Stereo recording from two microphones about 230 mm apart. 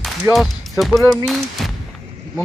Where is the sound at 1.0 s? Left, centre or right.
Centre.